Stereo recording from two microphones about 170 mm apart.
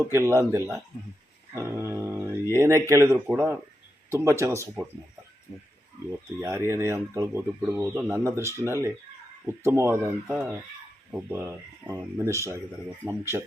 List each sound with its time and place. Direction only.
0.1 s speech: 15° right (ahead or behind)
6.1 s speech: 15° right (ahead or behind)
11.1 s speech: 10° right (ahead or behind)